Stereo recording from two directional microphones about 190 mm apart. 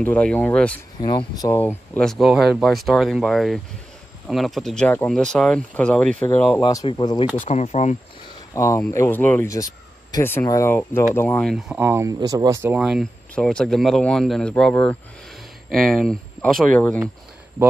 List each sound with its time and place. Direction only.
0.0 s speech: 5° left (ahead or behind)
1.0 s speech: 20° left (ahead or behind)
6.6 s speech: 20° left (ahead or behind)
7.4 s speech: 35° left (ahead or behind)
8.5 s speech: 15° left (ahead or behind)